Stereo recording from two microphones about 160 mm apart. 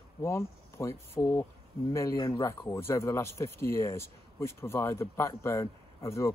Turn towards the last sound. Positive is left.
turn(degrees=20)  # may be behind; listen again after turning